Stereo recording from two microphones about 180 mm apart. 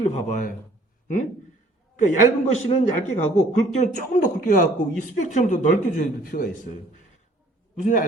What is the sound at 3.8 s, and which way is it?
Speech, 45° left (ahead or behind).